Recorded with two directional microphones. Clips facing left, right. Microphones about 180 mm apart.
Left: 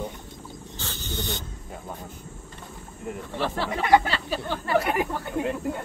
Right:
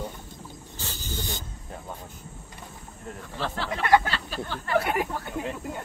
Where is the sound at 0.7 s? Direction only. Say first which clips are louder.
Left 2 dB; 10° right (ahead or behind).